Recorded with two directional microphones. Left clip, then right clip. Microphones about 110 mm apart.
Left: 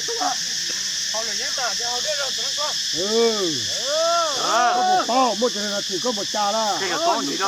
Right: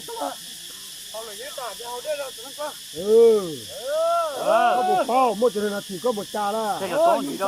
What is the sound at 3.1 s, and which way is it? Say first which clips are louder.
Speech: right 6 dB; 5° left (ahead or behind).